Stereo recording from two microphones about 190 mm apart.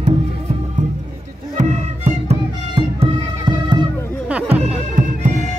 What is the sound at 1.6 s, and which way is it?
Music, 40° right (ahead or behind).